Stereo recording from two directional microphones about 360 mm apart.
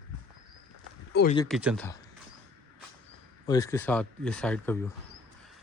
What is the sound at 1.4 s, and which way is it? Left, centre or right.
Speech, centre.